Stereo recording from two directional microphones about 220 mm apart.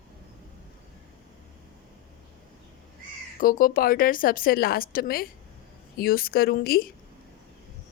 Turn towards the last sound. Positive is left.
turn(degrees=45)  # may be behind; listen again after turning